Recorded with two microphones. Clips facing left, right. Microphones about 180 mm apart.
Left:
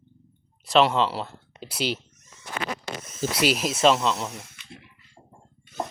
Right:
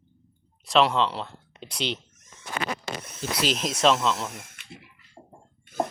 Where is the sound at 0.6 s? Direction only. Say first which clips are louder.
Left 1 dB; centre (ahead or behind).